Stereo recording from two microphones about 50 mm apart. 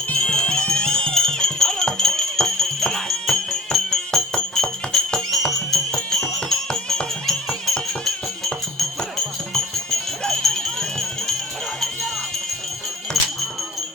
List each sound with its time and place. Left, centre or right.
0.1 s music: centre
10.2 s jingle bell: centre
13.2 s music: centre